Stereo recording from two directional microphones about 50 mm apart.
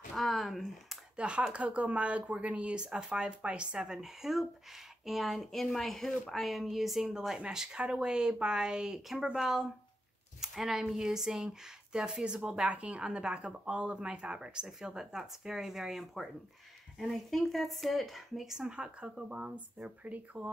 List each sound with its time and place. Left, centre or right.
0.1 s speech: centre
1.1 s speech: right; by 6.4 s centre
6.4 s speech: centre
18.6 s speech: centre